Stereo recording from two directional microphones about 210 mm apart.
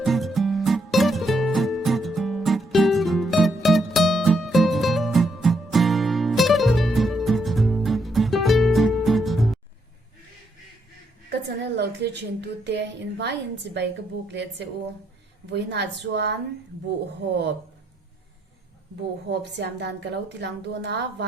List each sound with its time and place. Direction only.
0.0 s music: centre (ahead or behind)
11.3 s a sound: 55° right (ahead or behind)
13.7 s a woman's voice: 55° right (ahead or behind)
19.3 s a woman's voice: 55° right (ahead or behind)